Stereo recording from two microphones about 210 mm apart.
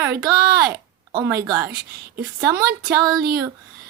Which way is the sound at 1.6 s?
50° right (ahead or behind).